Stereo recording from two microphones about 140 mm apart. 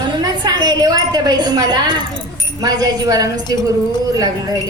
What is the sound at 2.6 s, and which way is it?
Speech, 25° right (ahead or behind).